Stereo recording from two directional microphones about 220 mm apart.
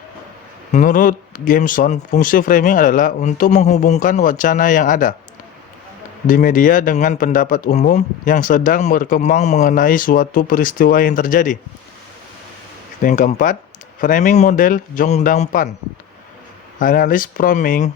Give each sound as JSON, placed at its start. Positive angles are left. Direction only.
{"t": 0.7, "sound": "speech", "side_deg": 35}
{"t": 6.2, "sound": "speech", "side_deg": 40}
{"t": 13.0, "sound": "speech", "side_deg": 35}
{"t": 16.8, "sound": "speech", "side_deg": 40}